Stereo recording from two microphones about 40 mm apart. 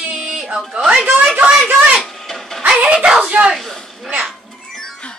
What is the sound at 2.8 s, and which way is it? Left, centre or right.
Music, right.